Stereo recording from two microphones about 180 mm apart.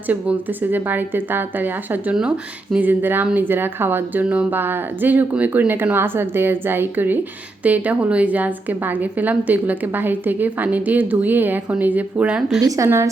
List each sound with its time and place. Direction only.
0.1 s a woman's voice: 10° right (ahead or behind)
12.6 s a woman's voice: 15° right (ahead or behind)